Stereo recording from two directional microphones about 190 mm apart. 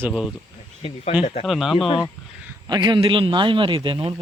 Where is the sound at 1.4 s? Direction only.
Centre (ahead or behind).